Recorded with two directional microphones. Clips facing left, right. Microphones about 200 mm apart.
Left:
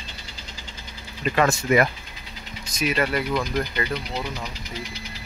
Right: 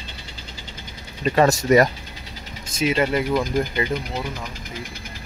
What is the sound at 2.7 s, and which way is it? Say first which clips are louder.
Speech: right 3 dB; 25° right (ahead or behind).